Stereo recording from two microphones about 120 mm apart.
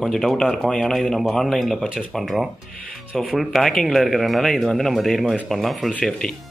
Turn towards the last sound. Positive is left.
turn(degrees=5)  # may be behind; listen again after turning